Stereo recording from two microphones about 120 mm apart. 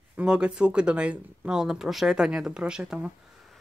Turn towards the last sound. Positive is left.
turn(degrees=-5)  # may be behind; listen again after turning